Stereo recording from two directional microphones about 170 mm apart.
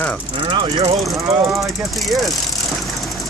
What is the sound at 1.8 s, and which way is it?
Speech, centre (ahead or behind).